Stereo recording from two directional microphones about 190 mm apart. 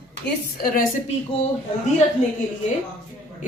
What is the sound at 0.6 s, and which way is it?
Speech, 50° left (ahead or behind).